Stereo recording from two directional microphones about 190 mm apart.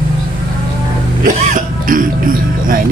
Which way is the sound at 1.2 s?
45° right (ahead or behind).